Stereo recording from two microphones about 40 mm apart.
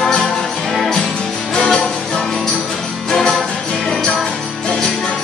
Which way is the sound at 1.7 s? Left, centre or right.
Centre.